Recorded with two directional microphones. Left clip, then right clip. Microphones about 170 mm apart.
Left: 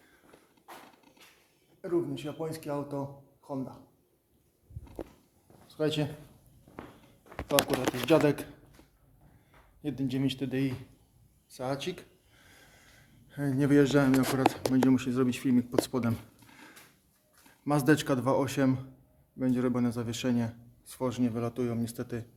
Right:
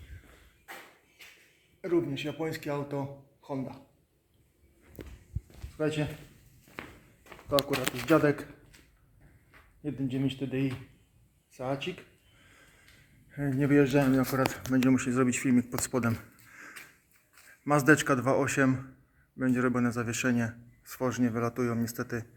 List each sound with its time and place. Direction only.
1.8 s a man's voice: 50° right (ahead or behind)
5.7 s speech: centre (ahead or behind)
7.5 s a man's voice: 10° left (ahead or behind)
9.8 s speech: centre (ahead or behind)
13.3 s a man's voice: centre (ahead or behind)
15.4 s speech: 5° right (ahead or behind)
17.7 s a man's voice: 20° left (ahead or behind)
20.4 s a sound: 10° left (ahead or behind)
21.1 s a man's voice: 10° left (ahead or behind)